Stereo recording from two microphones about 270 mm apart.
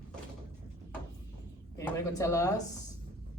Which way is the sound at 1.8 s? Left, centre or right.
Centre.